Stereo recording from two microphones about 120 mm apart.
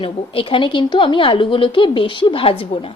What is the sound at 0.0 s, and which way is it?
Speech, 45° left (ahead or behind).